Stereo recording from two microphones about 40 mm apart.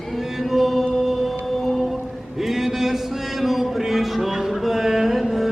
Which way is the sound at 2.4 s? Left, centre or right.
Centre.